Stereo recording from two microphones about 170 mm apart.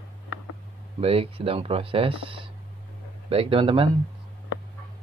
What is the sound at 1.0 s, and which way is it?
Speech, 35° right (ahead or behind).